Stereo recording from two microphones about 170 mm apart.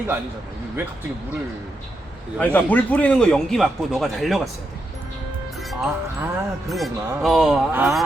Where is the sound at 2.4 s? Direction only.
10° left (ahead or behind).